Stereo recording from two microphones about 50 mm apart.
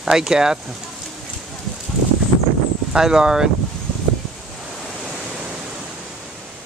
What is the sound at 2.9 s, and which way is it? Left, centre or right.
Speech, centre.